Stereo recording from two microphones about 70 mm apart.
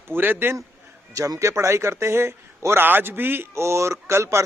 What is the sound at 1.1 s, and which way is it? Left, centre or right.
A man's voice, right.